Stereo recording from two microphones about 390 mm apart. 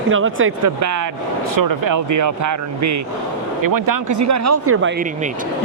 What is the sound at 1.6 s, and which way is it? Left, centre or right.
Speech, right.